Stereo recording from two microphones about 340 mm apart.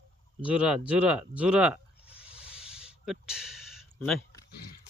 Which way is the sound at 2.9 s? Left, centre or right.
Centre.